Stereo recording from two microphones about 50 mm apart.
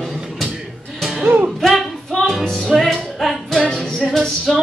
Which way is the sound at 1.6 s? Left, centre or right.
Centre.